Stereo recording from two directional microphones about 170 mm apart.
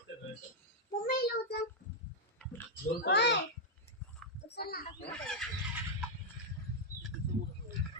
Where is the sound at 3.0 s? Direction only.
90° left.